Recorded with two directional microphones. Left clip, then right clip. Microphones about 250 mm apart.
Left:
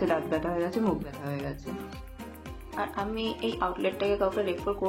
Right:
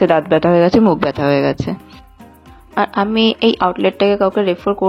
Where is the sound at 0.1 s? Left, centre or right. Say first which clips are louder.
Right 16 dB; right.